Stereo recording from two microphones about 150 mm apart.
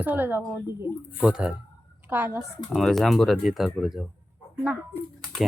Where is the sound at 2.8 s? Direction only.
Centre (ahead or behind).